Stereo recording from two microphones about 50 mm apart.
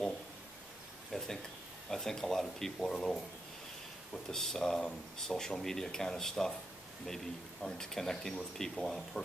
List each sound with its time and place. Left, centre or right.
1.1 s a sound: centre
1.9 s speech: centre
7.6 s speech: centre